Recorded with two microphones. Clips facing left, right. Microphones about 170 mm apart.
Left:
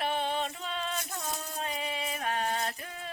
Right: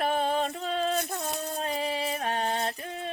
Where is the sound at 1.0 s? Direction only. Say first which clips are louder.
Right 5 dB; 60° right (ahead or behind).